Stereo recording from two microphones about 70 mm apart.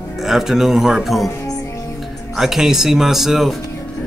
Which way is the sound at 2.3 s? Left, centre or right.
Centre.